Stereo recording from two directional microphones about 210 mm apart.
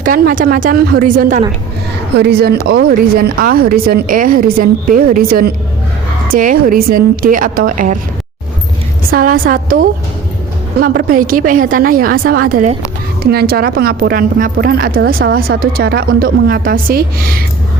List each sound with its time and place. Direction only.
0.0 s speech: 40° right (ahead or behind)
2.1 s speech: 50° right (ahead or behind)
9.0 s a woman's voice: 45° right (ahead or behind)